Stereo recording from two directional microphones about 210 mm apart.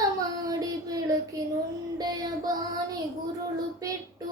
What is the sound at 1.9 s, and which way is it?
Child singing, 20° right (ahead or behind).